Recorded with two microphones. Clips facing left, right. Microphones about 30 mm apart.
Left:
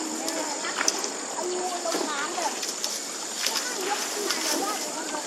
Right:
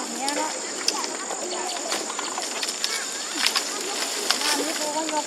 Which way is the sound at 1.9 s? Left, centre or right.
Right.